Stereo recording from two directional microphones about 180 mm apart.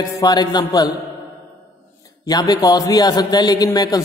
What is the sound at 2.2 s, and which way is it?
Mantra, 20° left (ahead or behind).